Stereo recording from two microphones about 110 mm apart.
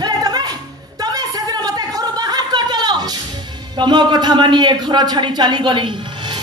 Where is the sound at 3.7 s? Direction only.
40° right (ahead or behind).